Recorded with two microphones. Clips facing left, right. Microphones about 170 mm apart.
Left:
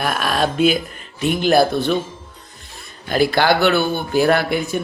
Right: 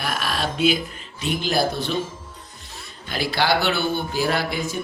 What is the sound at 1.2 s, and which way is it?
Speech, 55° left (ahead or behind).